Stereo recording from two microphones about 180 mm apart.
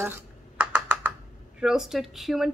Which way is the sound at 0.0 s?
10° right (ahead or behind).